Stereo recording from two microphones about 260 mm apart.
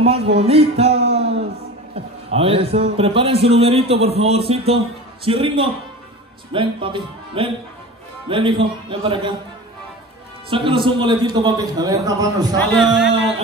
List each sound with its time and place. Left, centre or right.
0.0 s a man's voice: right
10.5 s a man's voice: centre
12.7 s a man's voice: centre